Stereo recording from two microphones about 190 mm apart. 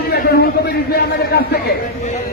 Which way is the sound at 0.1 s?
55° left (ahead or behind).